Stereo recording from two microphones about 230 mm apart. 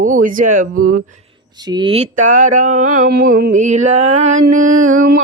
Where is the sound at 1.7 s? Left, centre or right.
Right.